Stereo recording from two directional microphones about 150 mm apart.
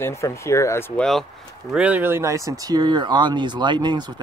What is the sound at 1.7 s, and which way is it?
Speech, 10° right (ahead or behind).